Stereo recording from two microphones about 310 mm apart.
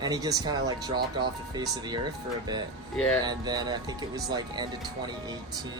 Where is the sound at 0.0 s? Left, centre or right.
Centre.